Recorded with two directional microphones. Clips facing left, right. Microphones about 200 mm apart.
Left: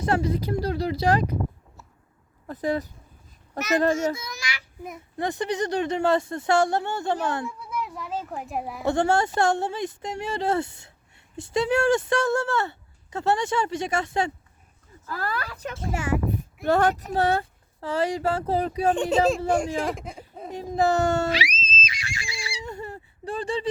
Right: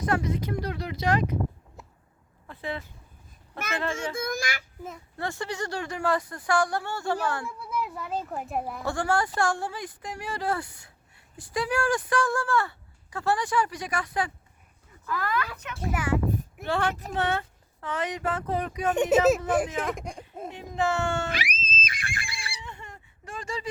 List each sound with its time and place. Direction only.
0.0 s speech: 30° left (ahead or behind)
2.5 s speech: 40° left (ahead or behind)
4.1 s a child's voice: 50° right (ahead or behind)
4.8 s speech: 15° left (ahead or behind)
7.8 s speech: centre (ahead or behind)
8.8 s speech: 20° left (ahead or behind)
16.6 s speech: 40° left (ahead or behind)
18.9 s speech: 10° right (ahead or behind)
20.5 s speech: 35° left (ahead or behind)
21.3 s a sound: 55° right (ahead or behind)
22.6 s a sound: 40° left (ahead or behind)